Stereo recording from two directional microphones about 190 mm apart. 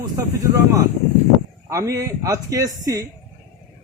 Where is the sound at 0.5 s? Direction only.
20° right (ahead or behind).